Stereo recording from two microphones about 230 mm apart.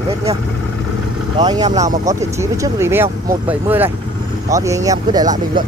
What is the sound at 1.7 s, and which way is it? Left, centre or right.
Speech, right.